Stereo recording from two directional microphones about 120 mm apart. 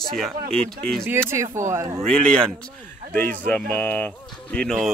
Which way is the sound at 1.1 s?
20° right (ahead or behind).